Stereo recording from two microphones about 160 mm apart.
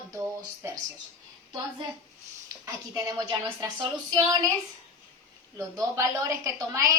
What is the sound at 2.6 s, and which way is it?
A woman's voice, 20° right (ahead or behind).